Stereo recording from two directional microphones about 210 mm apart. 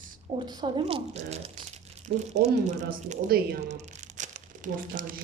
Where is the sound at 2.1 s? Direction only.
50° right (ahead or behind).